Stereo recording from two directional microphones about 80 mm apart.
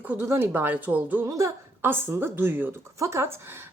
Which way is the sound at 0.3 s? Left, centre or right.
Right.